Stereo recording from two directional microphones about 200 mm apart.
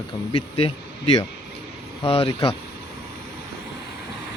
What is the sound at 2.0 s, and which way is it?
Speech, 30° left (ahead or behind).